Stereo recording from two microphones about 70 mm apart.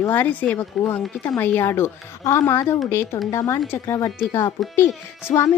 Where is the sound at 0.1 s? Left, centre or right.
Left.